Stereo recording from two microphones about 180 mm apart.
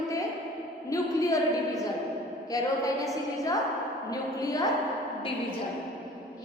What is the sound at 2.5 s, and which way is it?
A woman's voice, 20° left (ahead or behind).